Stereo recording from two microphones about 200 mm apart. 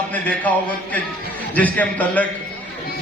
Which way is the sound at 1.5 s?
10° left (ahead or behind).